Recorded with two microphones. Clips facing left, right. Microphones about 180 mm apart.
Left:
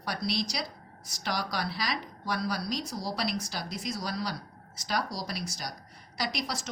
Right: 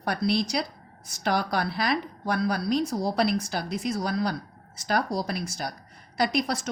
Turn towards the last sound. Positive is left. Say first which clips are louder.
# right 8 dB
turn(degrees=-55)  # may be behind; listen again after turning